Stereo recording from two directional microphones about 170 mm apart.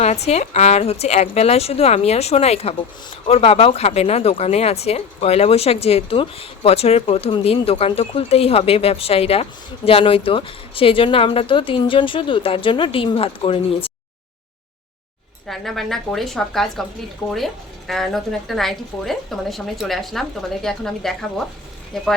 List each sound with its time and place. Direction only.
0.0 s speech: 40° left (ahead or behind)
15.4 s speech: centre (ahead or behind)